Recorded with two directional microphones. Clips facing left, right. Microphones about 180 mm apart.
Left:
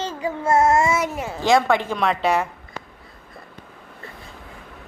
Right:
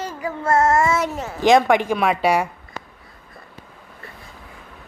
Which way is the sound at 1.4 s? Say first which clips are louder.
Right 3 dB; 15° right (ahead or behind).